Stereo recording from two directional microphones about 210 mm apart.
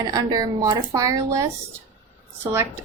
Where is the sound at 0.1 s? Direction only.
20° right (ahead or behind).